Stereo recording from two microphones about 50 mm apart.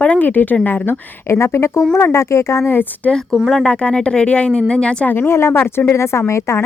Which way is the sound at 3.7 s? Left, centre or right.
Left.